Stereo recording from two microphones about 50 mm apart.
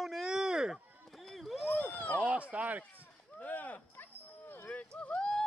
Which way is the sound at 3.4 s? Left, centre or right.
Left.